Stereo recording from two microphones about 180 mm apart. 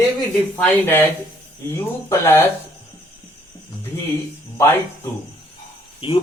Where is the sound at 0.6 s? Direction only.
10° left (ahead or behind).